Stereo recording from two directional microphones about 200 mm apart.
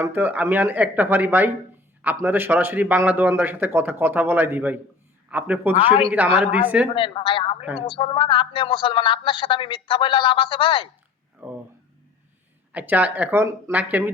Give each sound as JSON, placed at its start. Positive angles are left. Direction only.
{"t": 0.0, "sound": "a man's voice", "side_deg": -10}
{"t": 5.7, "sound": "a woman's voice", "side_deg": 25}
{"t": 6.1, "sound": "a man's voice", "side_deg": -10}
{"t": 6.9, "sound": "a woman's voice", "side_deg": 25}
{"t": 11.4, "sound": "a man's voice", "side_deg": -10}
{"t": 12.7, "sound": "a man's voice", "side_deg": -10}